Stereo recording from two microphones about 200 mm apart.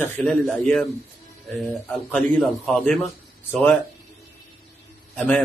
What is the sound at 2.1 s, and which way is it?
A man's voice, centre (ahead or behind).